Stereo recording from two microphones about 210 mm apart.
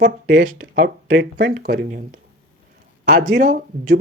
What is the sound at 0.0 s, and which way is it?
Speech, 45° right (ahead or behind).